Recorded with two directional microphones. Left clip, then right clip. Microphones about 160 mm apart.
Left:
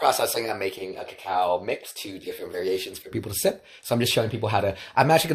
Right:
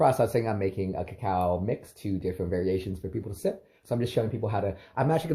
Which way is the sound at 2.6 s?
30° left (ahead or behind).